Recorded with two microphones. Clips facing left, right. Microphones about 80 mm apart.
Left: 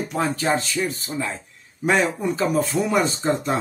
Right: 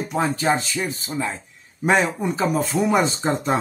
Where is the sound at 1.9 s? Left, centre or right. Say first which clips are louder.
Right 1 dB; right.